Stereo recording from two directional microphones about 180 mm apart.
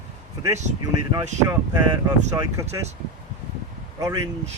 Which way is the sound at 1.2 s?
40° right (ahead or behind).